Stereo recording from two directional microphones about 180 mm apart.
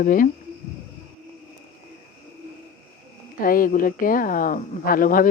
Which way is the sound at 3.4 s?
50° left (ahead or behind).